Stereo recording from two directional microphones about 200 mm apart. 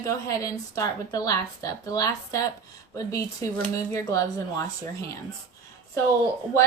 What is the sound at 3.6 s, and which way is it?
A woman's voice, 15° left (ahead or behind).